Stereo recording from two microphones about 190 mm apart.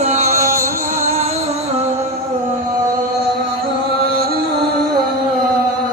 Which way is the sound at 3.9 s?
50° right (ahead or behind).